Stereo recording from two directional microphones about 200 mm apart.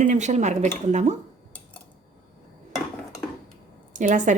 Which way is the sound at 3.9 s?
40° right (ahead or behind).